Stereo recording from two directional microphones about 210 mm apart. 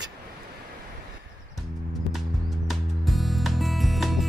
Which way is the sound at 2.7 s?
Centre (ahead or behind).